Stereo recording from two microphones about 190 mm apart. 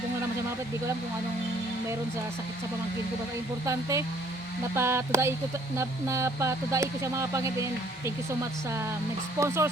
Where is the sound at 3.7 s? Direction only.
15° right (ahead or behind).